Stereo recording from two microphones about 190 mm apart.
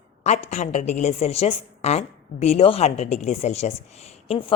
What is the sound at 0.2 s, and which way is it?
A woman's voice, 35° left (ahead or behind).